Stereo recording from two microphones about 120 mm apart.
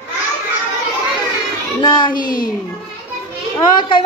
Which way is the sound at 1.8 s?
35° left (ahead or behind).